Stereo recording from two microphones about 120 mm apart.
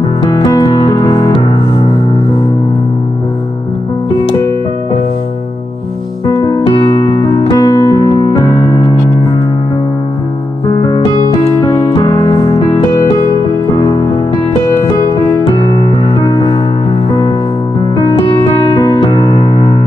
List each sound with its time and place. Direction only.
0.2 s music: 35° left (ahead or behind)
6.2 s music: 35° left (ahead or behind)
11.7 s music: 35° left (ahead or behind)
13.7 s music: 35° left (ahead or behind)
15.7 s music: 35° left (ahead or behind)
18.7 s music: 35° left (ahead or behind)